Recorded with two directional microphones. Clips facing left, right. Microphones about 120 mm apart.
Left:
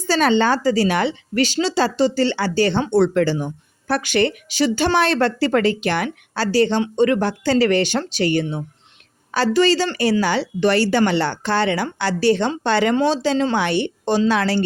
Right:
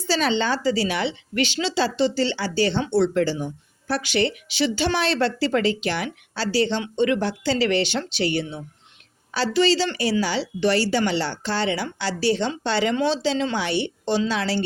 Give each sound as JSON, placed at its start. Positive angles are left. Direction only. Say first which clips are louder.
{"t": 0.1, "sound": "speech", "louder": "left 5 dB", "side_deg": 50}